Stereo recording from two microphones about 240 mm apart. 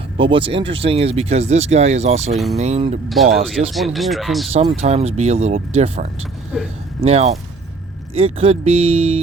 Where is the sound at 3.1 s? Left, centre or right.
Centre.